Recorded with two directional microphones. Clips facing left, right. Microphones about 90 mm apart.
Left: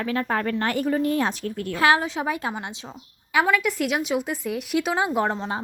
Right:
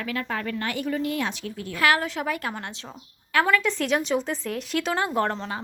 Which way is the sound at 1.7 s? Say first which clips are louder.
Left 2 dB; 25° left (ahead or behind).